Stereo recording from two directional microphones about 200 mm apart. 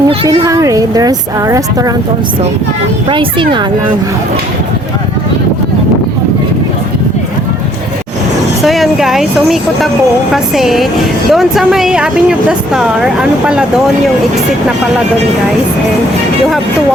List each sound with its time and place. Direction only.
0.1 s speech: 20° right (ahead or behind)
3.1 s speech: 25° right (ahead or behind)
8.6 s speech: centre (ahead or behind)